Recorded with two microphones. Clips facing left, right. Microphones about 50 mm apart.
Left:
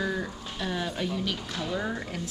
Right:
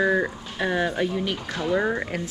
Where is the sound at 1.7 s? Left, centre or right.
Right.